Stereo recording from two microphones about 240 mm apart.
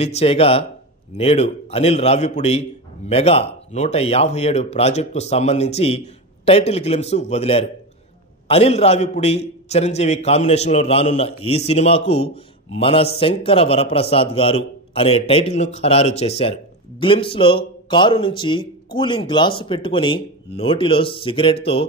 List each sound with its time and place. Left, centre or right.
0.0 s a man's voice: left